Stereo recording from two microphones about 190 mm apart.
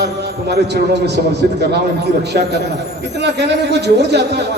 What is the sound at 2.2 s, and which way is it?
A man's voice, 60° right (ahead or behind).